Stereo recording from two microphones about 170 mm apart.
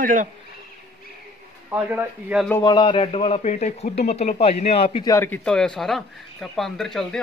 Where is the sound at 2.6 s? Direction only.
30° left (ahead or behind).